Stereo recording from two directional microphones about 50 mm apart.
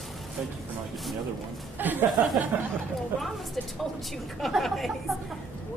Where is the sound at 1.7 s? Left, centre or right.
Right.